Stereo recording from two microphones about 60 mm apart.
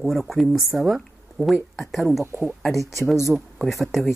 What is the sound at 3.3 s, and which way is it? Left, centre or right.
Speech, centre.